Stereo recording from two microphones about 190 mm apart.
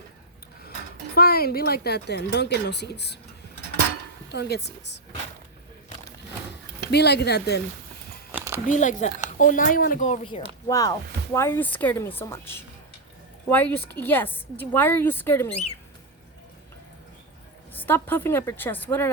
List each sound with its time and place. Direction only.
1.1 s speech: 55° left (ahead or behind)
4.3 s speech: 60° left (ahead or behind)
6.9 s speech: 60° left (ahead or behind)
8.3 s a sound: 10° right (ahead or behind)
8.6 s speech: 40° left (ahead or behind)
10.7 s a woman's voice: 20° left (ahead or behind)
17.7 s a woman's voice: 10° left (ahead or behind)